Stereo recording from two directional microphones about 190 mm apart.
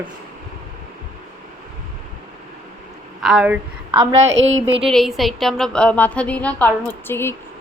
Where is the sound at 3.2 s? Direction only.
5° right (ahead or behind).